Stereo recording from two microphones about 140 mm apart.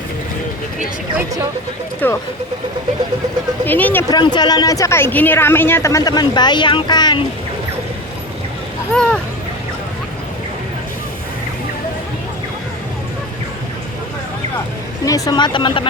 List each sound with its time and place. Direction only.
2.0 s speech: 15° left (ahead or behind)
3.7 s speech: 15° left (ahead or behind)
4.1 s a woman's voice: 30° left (ahead or behind)
8.9 s speech: 5° left (ahead or behind)
15.0 s speech: 25° left (ahead or behind)